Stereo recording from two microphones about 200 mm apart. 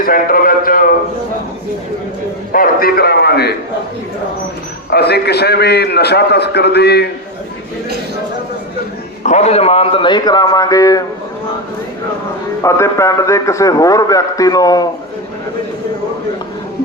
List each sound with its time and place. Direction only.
0.0 s a man's voice: 45° left (ahead or behind)
2.5 s a man's voice: 45° left (ahead or behind)
4.9 s a man's voice: 55° left (ahead or behind)
9.2 s a man's voice: 35° left (ahead or behind); by 11.0 s 15° left (ahead or behind)
12.6 s a man's voice: 15° left (ahead or behind)